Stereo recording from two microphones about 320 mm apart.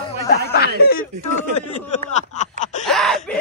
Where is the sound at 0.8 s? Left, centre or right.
Left.